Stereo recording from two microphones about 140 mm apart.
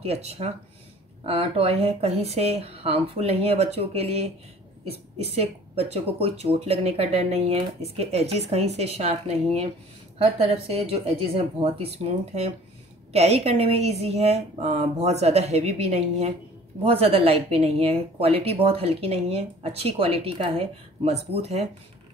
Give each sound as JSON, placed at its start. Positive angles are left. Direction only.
{"t": 0.0, "sound": "speech", "side_deg": -45}